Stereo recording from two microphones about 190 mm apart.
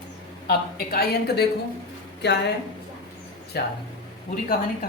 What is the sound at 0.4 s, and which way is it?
Speech, 55° left (ahead or behind).